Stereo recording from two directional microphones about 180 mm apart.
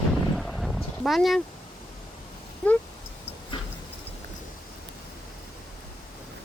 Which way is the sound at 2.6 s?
5° left (ahead or behind).